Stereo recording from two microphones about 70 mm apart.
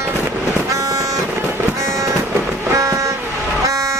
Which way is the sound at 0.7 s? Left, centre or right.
Right.